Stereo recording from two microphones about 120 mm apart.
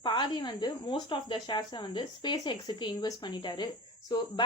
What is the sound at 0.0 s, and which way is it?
A woman's voice, 40° left (ahead or behind).